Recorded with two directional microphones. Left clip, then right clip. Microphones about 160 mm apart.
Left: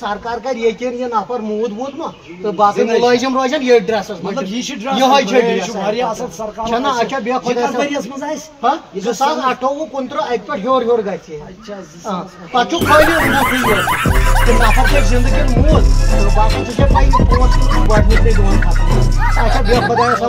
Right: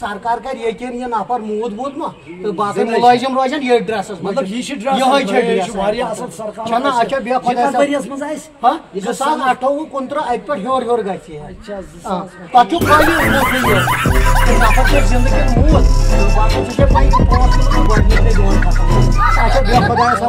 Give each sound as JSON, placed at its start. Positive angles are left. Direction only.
{"t": 2.5, "sound": "speech", "side_deg": -30}
{"t": 12.8, "sound": "music", "side_deg": 0}